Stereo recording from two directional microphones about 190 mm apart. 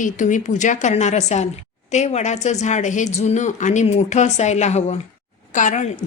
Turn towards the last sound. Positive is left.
turn(degrees=40)  # may be behind; listen again after turning